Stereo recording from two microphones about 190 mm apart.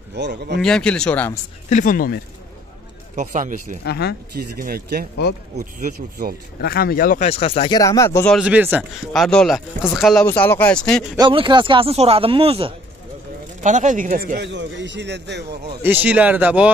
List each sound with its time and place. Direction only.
0.1 s speech: 60° right (ahead or behind)
0.6 s speech: 5° left (ahead or behind)
1.7 s speech: 40° left (ahead or behind)
3.2 s speech: 45° right (ahead or behind)
3.8 s speech: 60° left (ahead or behind)
4.4 s speech: 50° right (ahead or behind)
6.6 s speech: 55° left (ahead or behind)
7.2 s speech: 30° left (ahead or behind); by 8.3 s 15° left (ahead or behind)
8.3 s speech: 5° right (ahead or behind)
10.2 s speech: 10° left (ahead or behind)
11.1 s speech: 25° right (ahead or behind)
13.6 s speech: 40° right (ahead or behind); by 15.4 s 65° right (ahead or behind)
15.8 s a man's voice: 10° right (ahead or behind)